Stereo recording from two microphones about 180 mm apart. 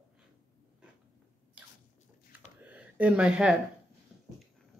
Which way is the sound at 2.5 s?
10° right (ahead or behind).